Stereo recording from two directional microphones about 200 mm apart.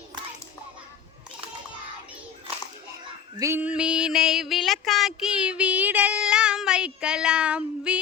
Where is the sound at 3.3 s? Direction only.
15° right (ahead or behind).